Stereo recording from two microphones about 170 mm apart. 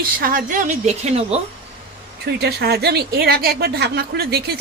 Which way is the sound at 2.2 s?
70° right (ahead or behind).